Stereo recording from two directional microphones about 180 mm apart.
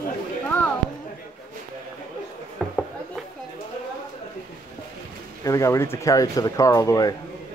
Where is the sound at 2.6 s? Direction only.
5° left (ahead or behind).